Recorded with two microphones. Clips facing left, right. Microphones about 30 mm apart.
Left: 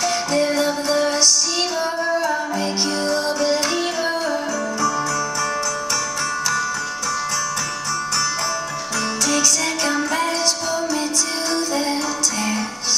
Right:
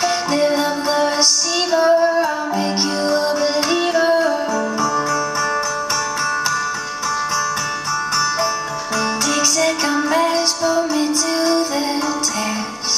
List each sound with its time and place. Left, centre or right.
0.0 s music: right
9.6 s music: centre